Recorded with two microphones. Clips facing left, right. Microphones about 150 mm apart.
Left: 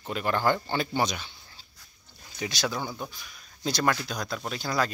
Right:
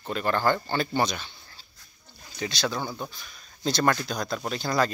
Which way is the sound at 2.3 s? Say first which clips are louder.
Right 1 dB; 15° left (ahead or behind).